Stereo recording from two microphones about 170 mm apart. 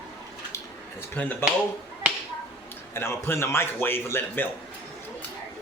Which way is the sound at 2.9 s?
15° left (ahead or behind).